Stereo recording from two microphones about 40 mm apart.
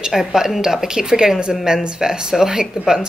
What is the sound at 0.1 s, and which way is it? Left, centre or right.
Speech, centre.